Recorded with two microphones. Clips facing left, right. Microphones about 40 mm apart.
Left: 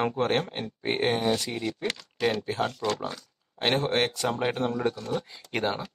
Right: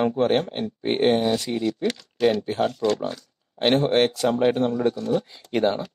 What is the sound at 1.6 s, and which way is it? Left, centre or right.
Speech, centre.